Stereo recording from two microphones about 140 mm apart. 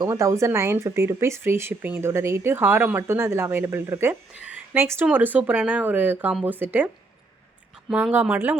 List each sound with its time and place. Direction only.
0.0 s speech: 20° right (ahead or behind)